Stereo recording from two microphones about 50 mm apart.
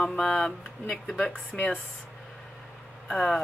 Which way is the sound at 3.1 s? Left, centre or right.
Centre.